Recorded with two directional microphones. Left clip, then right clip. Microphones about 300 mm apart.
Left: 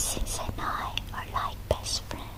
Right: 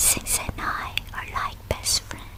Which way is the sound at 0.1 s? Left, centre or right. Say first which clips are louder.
Right 7 dB; centre.